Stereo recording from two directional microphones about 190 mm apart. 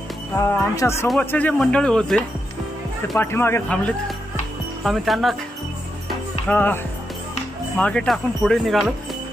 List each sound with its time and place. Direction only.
0.4 s speech: 15° left (ahead or behind); by 5.3 s centre (ahead or behind)
6.4 s speech: 10° left (ahead or behind)